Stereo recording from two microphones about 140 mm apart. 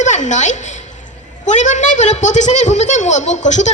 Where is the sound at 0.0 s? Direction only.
60° left (ahead or behind).